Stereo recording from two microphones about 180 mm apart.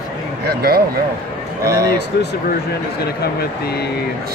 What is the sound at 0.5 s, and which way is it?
Speech, 60° right (ahead or behind).